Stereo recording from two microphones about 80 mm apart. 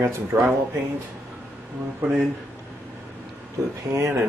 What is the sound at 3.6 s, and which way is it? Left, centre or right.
Speech, right.